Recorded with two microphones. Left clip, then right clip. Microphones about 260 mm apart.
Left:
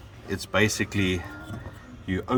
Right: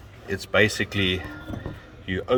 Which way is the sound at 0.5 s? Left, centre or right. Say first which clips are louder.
Right 3 dB; right.